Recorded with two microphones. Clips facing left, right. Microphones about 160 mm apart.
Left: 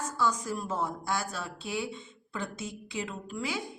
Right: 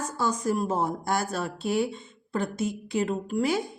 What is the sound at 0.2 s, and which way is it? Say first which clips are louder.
Speech: right 5 dB; 50° right (ahead or behind).